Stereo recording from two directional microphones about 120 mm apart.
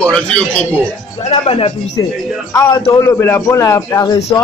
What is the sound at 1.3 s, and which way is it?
Speech, 55° left (ahead or behind).